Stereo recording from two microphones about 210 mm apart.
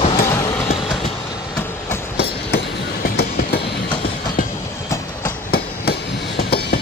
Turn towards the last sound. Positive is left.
turn(degrees=50)  # may be behind; listen again after turning